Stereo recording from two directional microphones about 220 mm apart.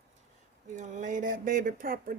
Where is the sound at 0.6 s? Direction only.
35° right (ahead or behind).